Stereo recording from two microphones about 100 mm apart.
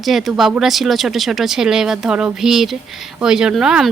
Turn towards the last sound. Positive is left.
turn(degrees=-5)  # may be behind; listen again after turning